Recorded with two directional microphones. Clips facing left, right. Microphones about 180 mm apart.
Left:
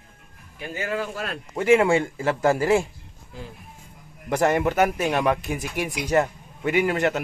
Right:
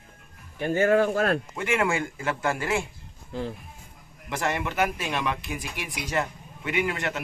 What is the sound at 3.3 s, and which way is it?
Speech, 70° right (ahead or behind).